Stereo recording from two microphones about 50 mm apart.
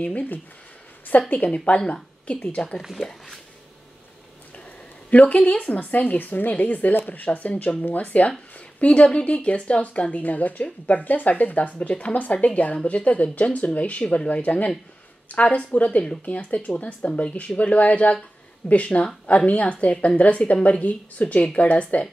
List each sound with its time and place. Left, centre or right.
0.0 s speech: left; by 3.1 s centre
5.2 s speech: left